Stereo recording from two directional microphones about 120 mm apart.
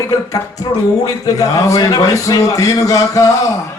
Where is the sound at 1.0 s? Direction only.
30° left (ahead or behind).